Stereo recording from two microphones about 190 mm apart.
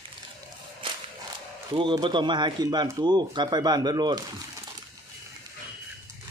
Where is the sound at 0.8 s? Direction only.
25° right (ahead or behind).